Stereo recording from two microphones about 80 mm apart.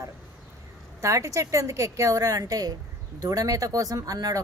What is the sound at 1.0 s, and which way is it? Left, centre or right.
A woman's voice, right.